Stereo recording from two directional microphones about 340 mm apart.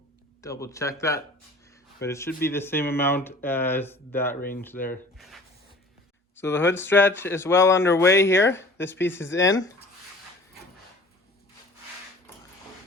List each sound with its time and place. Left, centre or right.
0.4 s speech: centre
4.4 s speech: left
4.6 s speech: centre